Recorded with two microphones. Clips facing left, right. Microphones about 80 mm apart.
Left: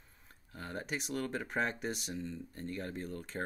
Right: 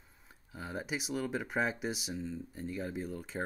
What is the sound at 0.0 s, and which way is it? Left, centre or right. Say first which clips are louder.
Speech: right 1 dB; centre.